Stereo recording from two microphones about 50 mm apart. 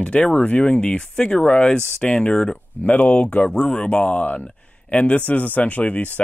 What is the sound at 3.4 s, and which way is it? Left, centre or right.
Speech, centre.